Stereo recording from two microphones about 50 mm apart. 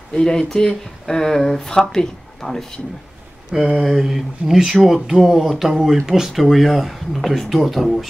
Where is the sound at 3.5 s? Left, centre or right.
Centre.